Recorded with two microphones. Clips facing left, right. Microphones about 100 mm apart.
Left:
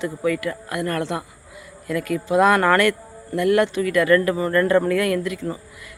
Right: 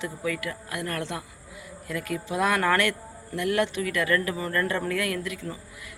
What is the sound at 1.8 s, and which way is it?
Speech, 65° left (ahead or behind).